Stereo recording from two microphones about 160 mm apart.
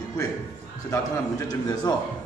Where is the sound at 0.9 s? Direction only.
25° left (ahead or behind).